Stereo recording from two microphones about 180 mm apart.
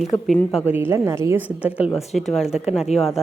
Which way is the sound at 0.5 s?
10° right (ahead or behind).